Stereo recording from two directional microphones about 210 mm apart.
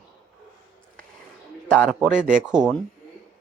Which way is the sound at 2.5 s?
5° right (ahead or behind).